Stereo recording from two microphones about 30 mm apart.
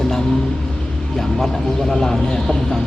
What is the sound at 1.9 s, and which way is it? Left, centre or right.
Speech, centre.